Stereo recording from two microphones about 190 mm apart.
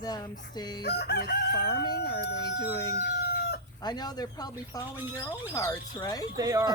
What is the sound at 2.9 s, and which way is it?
Chicken, 55° left (ahead or behind).